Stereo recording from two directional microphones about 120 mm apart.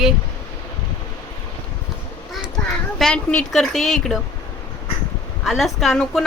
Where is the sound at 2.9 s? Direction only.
5° left (ahead or behind).